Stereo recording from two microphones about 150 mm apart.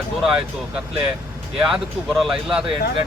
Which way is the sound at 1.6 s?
5° right (ahead or behind).